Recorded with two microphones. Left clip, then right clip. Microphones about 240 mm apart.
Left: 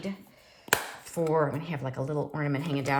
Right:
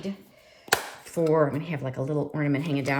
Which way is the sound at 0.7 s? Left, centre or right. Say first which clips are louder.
Right 2 dB; centre.